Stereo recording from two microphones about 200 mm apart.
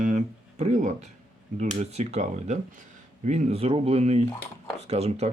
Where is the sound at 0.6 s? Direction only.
35° right (ahead or behind).